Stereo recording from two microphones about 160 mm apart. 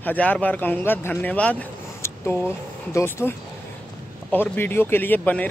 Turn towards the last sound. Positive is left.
turn(degrees=10)  # may be behind; listen again after turning